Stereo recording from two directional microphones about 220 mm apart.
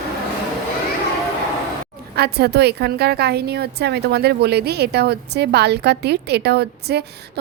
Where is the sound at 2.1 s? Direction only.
45° right (ahead or behind).